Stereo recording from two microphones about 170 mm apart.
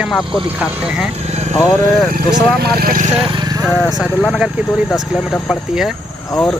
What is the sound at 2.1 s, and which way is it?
Speech, 60° right (ahead or behind).